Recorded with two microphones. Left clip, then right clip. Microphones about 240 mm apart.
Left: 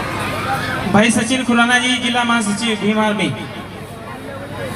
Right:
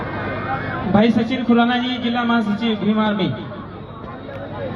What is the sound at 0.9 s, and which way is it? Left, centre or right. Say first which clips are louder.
A man's voice: left 3 dB; left.